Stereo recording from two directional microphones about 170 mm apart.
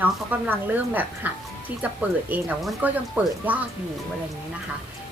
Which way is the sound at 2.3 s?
10° right (ahead or behind).